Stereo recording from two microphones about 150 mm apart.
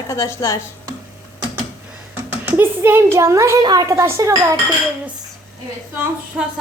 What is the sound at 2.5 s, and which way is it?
A woman's voice, 15° right (ahead or behind).